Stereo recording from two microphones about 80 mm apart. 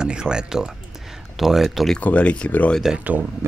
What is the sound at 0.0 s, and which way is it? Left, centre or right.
Speech, centre.